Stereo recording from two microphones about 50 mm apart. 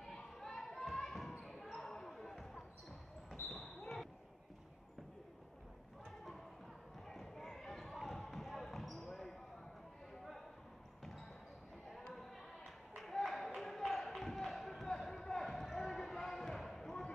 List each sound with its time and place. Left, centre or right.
0.0 s basketball bounce: centre
3.3 s basketball bounce: left
7.1 s basketball bounce: centre
12.9 s a sound: centre